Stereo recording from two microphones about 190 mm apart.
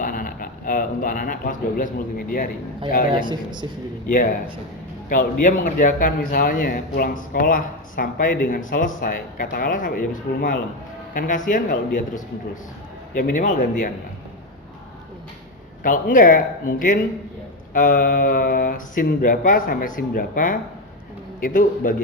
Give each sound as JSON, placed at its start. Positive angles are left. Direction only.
{"t": 0.0, "sound": "speech", "side_deg": 45}
{"t": 3.1, "sound": "speech", "side_deg": -25}
{"t": 4.1, "sound": "a man's voice", "side_deg": 45}
{"t": 15.8, "sound": "a man's voice", "side_deg": 45}